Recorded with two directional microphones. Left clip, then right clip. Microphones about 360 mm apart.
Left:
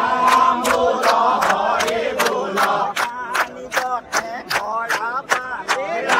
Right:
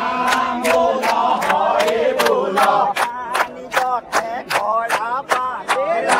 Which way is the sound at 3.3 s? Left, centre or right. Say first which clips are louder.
Right 2 dB; right.